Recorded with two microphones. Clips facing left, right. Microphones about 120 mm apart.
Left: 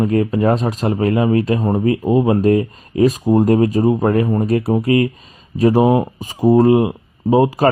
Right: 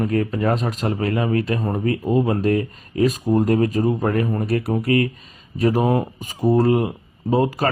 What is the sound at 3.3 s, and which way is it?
Speech, 35° left (ahead or behind).